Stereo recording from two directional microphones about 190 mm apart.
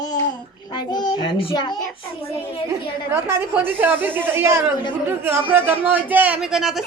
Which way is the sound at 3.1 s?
15° right (ahead or behind).